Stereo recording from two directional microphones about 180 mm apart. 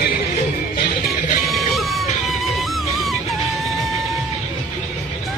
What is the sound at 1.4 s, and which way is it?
Music, centre (ahead or behind).